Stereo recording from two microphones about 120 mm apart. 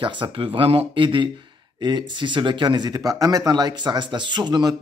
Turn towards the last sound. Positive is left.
turn(degrees=-35)  # may be behind; listen again after turning